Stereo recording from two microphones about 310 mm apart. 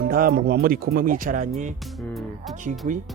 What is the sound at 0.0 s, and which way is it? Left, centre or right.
Speech, right.